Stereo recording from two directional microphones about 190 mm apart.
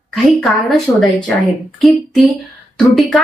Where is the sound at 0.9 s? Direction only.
15° left (ahead or behind).